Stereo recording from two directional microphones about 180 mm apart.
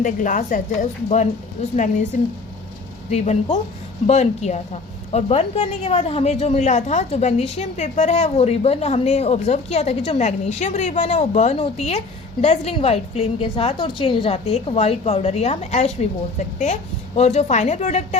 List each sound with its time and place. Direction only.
0.0 s a woman's voice: 45° left (ahead or behind)
3.1 s a woman's voice: 40° left (ahead or behind)
17.2 s a woman's voice: 35° left (ahead or behind)